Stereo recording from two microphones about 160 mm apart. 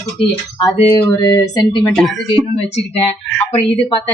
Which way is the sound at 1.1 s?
20° left (ahead or behind).